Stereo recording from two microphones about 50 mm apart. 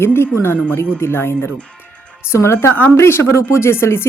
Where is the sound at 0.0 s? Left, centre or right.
Left.